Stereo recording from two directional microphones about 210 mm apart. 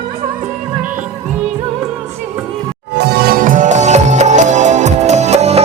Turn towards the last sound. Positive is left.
turn(degrees=-30)  # may be behind; listen again after turning